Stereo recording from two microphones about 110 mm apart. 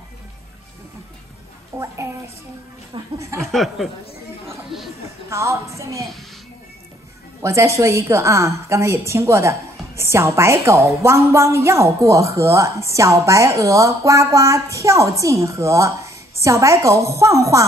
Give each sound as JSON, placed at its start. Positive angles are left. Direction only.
{"t": 1.7, "sound": "a woman's voice", "side_deg": -25}
{"t": 3.3, "sound": "speech", "side_deg": 0}
{"t": 5.3, "sound": "a woman's voice", "side_deg": -25}
{"t": 7.4, "sound": "a woman's voice", "side_deg": -25}